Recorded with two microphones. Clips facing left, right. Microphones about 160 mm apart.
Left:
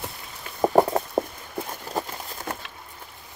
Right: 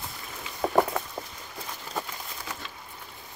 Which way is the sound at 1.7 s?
45° left (ahead or behind).